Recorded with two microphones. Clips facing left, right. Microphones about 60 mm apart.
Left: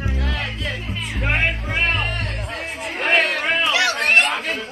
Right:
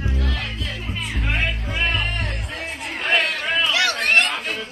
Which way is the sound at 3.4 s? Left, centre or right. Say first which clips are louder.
Left 2 dB; left.